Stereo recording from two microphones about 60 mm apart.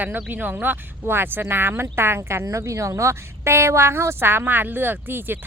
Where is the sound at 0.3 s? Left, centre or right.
Right.